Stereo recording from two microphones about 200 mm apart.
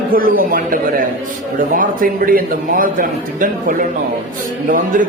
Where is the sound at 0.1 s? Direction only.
45° right (ahead or behind).